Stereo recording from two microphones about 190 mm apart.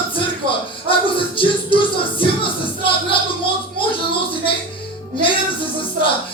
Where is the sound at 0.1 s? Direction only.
25° left (ahead or behind).